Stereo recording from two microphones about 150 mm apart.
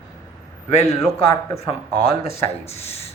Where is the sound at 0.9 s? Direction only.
20° left (ahead or behind).